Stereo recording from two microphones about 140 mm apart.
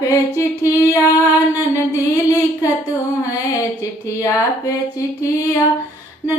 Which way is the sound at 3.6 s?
25° left (ahead or behind).